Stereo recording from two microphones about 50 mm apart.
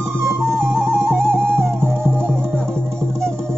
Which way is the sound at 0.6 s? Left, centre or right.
Right.